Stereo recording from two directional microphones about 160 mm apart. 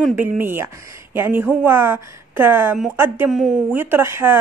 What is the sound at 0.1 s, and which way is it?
A woman's voice, 15° right (ahead or behind).